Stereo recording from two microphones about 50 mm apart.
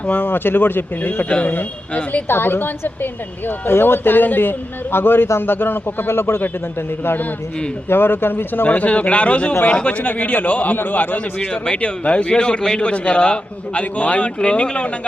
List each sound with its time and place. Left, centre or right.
0.0 s speech: left
1.3 s a man's voice: left
2.2 s a woman's voice: left
8.7 s a man's voice: left
11.3 s a man's voice: centre